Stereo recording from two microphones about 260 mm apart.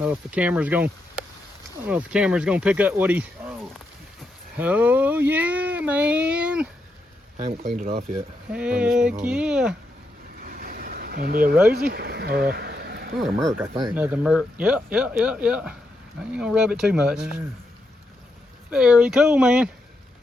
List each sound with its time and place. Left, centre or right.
0.0 s speech: centre
1.9 s speech: centre
4.5 s speech: centre
7.8 s speech: right
8.5 s speech: centre
10.4 s vehicle: right
11.7 s speech: right
13.1 s speech: centre
13.6 s speech: centre
18.7 s speech: centre